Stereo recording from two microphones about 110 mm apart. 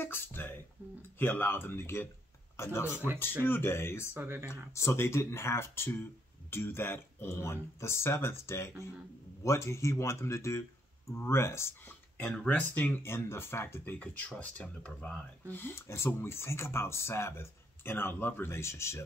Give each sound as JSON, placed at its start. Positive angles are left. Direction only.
{"t": 0.0, "sound": "speech", "side_deg": 20}
{"t": 0.8, "sound": "speech", "side_deg": -20}
{"t": 1.1, "sound": "speech", "side_deg": 20}
{"t": 4.1, "sound": "speech", "side_deg": -20}
{"t": 4.7, "sound": "speech", "side_deg": 25}